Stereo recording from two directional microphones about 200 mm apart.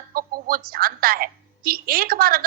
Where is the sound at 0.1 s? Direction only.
45° right (ahead or behind).